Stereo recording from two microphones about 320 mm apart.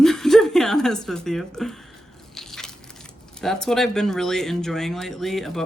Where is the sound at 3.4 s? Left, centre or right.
Centre.